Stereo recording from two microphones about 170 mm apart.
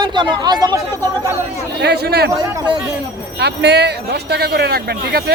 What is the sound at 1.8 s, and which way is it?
Speech, 75° right (ahead or behind).